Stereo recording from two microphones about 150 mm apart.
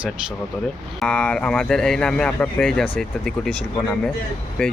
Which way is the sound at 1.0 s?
5° left (ahead or behind).